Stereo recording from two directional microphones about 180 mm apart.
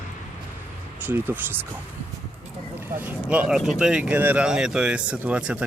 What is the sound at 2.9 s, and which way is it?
Speech, 10° right (ahead or behind).